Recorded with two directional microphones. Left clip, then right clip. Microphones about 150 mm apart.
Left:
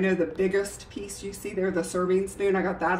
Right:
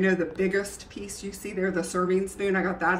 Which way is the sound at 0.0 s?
10° left (ahead or behind).